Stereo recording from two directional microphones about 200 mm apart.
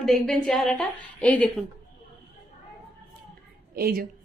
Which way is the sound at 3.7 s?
50° right (ahead or behind).